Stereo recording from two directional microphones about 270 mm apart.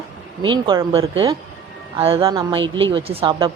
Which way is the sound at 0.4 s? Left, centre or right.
Centre.